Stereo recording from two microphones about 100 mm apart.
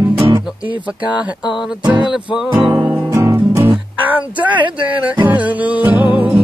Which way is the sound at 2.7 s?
20° right (ahead or behind).